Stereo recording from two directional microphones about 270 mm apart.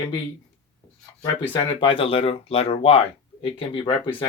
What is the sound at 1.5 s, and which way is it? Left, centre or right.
A man's voice, centre.